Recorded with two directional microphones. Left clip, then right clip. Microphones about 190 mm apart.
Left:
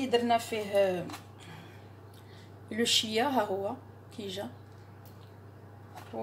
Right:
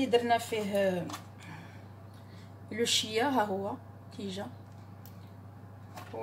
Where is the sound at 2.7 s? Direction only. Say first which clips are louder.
Left 2 dB; 30° left (ahead or behind).